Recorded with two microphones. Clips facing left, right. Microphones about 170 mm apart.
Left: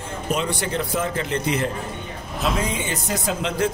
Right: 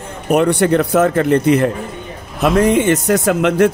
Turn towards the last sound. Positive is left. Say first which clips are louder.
# right 10 dB
turn(degrees=-65)  # may be behind; listen again after turning